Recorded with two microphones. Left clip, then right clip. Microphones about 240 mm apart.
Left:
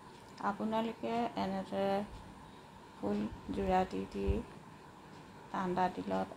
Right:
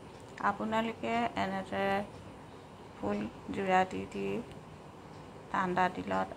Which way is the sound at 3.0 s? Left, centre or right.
Centre.